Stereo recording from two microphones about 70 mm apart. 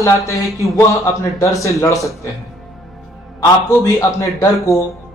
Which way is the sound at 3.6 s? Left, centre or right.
Left.